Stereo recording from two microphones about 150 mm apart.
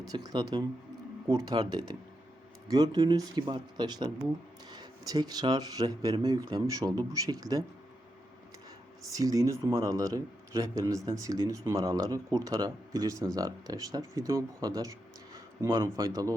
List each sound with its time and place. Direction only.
0.0 s a man's voice: 25° right (ahead or behind)
9.1 s a man's voice: 25° right (ahead or behind)